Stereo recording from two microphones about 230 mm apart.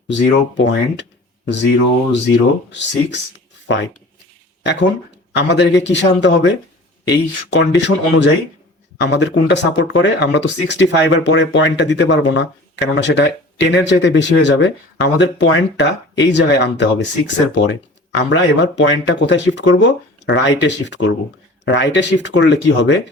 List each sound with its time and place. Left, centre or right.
0.1 s speech: left
2.6 s speech: left
4.6 s speech: left